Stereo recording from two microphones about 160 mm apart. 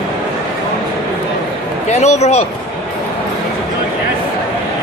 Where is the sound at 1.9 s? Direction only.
45° left (ahead or behind).